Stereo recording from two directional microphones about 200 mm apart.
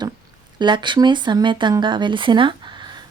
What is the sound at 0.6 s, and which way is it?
Speech, 25° right (ahead or behind).